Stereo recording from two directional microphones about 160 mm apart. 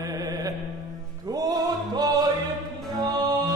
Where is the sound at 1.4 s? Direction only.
25° right (ahead or behind).